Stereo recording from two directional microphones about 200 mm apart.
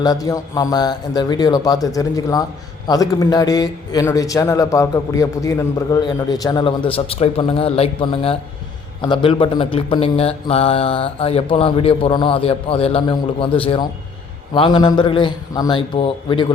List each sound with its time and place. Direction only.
0.0 s a man's voice: 20° left (ahead or behind)